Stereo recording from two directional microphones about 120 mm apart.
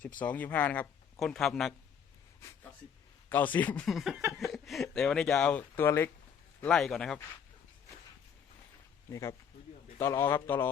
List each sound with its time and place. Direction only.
0.2 s speech: 15° left (ahead or behind)
3.2 s speech: 15° left (ahead or behind)
3.8 s speech: centre (ahead or behind)
5.7 s a man's voice: 20° left (ahead or behind)
6.6 s speech: 5° left (ahead or behind)
9.0 s a man's voice: 25° left (ahead or behind)